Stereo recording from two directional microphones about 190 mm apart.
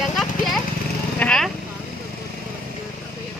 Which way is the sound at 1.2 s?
5° left (ahead or behind).